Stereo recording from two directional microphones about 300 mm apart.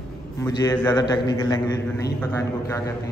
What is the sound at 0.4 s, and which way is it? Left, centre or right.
A man's voice, centre.